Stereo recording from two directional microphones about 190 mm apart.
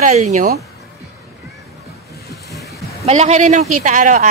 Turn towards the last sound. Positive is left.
turn(degrees=-40)  # may be behind; listen again after turning